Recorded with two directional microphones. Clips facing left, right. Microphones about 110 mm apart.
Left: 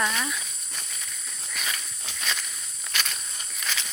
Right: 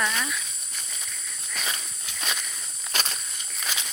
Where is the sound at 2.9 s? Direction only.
35° right (ahead or behind).